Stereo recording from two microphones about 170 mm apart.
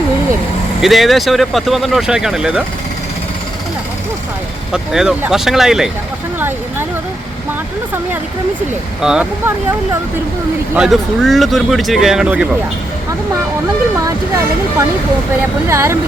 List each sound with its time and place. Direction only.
0.8 s speech: centre (ahead or behind)
4.7 s speech: 5° right (ahead or behind)
9.0 s speech: 5° right (ahead or behind)
10.8 s speech: centre (ahead or behind)
15.4 s speech: 15° right (ahead or behind)